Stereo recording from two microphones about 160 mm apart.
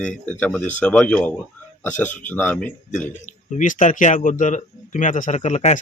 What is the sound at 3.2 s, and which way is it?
Speech, 50° left (ahead or behind).